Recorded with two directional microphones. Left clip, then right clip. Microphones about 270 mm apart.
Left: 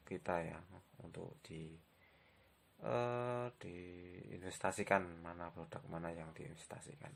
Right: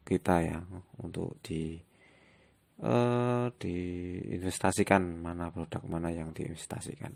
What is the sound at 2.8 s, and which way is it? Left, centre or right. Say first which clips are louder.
Speech: right 10 dB; right.